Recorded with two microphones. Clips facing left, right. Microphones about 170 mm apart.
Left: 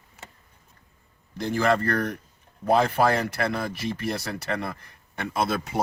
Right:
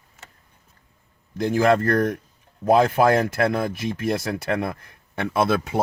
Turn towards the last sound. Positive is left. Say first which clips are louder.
# right 5 dB
turn(degrees=-60)  # may be behind; listen again after turning